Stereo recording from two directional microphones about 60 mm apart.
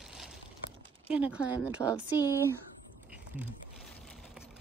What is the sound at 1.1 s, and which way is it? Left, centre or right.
Speech, right.